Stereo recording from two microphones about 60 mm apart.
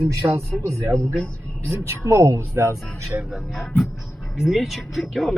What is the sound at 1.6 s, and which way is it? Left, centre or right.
Speech, right.